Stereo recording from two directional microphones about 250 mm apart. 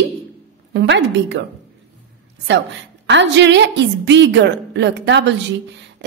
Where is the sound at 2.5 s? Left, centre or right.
Right.